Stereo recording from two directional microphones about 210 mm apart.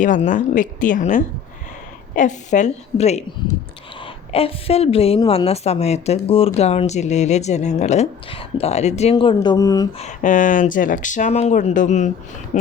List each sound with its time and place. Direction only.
0.0 s a woman's voice: 35° left (ahead or behind); by 9.9 s 15° left (ahead or behind)
10.0 s speech: 35° left (ahead or behind)